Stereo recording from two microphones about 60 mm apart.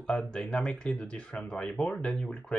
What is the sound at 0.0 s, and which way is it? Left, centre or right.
Speech, centre.